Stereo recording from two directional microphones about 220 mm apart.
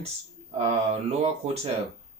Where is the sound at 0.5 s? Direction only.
30° right (ahead or behind).